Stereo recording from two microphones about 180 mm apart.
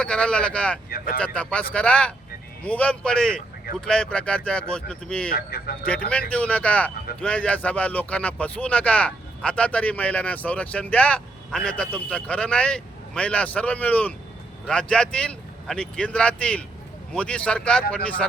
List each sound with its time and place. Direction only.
0.0 s speech: 5° left (ahead or behind)
0.9 s speech: 55° left (ahead or behind)
1.2 s speech: 5° left (ahead or behind)
5.3 s speech: 55° left (ahead or behind)
6.3 s speech: 5° left (ahead or behind)